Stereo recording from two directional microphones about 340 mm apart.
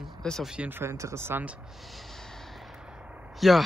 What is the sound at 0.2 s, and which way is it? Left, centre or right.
Speech, centre.